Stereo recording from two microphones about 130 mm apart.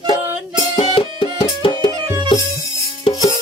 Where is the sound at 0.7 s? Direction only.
45° left (ahead or behind).